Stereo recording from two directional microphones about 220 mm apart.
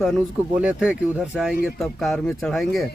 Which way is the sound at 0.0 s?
Centre (ahead or behind).